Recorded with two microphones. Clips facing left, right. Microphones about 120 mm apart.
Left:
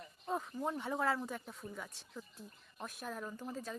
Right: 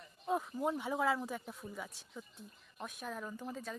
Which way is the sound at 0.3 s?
5° right (ahead or behind).